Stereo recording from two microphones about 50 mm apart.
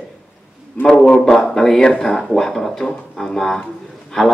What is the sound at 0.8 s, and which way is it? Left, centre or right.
Speech, centre.